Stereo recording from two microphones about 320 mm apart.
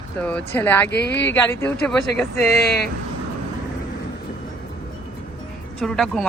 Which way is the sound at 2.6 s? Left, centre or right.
Left.